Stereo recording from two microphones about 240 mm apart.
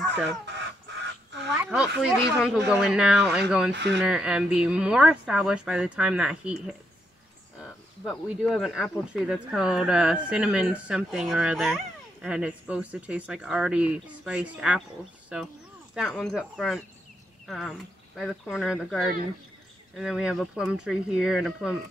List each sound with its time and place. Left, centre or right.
0.1 s a sound: right
1.6 s a sound: centre
2.8 s speech: centre
3.7 s speech: right
4.0 s speech: centre
8.0 s speech: centre